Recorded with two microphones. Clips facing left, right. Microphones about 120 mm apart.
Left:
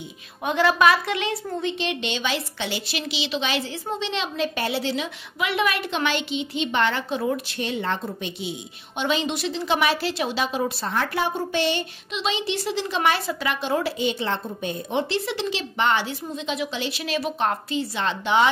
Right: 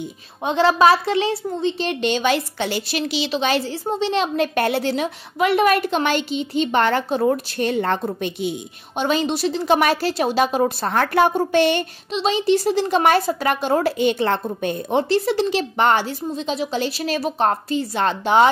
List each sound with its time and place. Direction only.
0.5 s a woman's voice: 30° right (ahead or behind); by 11.8 s 55° right (ahead or behind)
12.1 s a woman's voice: 40° right (ahead or behind)